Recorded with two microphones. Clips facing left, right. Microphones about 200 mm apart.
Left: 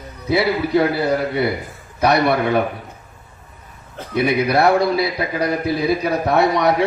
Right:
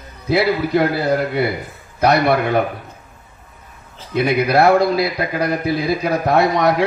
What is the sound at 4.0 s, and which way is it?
Speech, 60° left (ahead or behind).